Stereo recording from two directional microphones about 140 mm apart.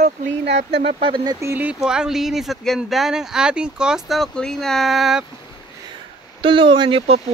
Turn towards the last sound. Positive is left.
turn(degrees=-35)  # may be behind; listen again after turning